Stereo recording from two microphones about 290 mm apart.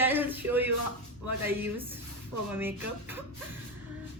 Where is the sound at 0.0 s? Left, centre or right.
Centre.